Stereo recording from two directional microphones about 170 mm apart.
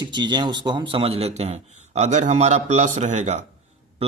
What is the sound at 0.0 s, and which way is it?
Speech, 25° right (ahead or behind).